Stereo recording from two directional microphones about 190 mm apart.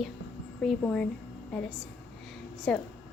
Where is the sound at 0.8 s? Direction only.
5° left (ahead or behind).